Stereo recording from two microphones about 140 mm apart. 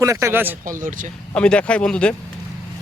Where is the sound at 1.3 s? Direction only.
10° left (ahead or behind).